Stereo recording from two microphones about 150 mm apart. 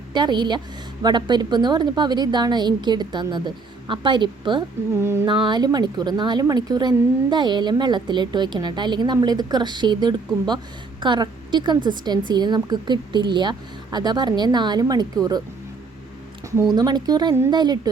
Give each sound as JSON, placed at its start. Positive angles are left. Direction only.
{"t": 0.1, "sound": "a woman's voice", "side_deg": -30}
{"t": 4.9, "sound": "a sound", "side_deg": -15}
{"t": 5.2, "sound": "a woman's voice", "side_deg": -30}
{"t": 16.7, "sound": "a woman's voice", "side_deg": -25}